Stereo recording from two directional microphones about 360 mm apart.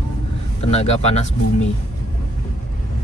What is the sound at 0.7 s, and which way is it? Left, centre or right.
Speech, centre.